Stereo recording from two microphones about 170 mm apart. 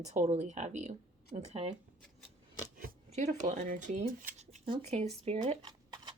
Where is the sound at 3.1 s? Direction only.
45° right (ahead or behind); by 6.1 s 25° right (ahead or behind).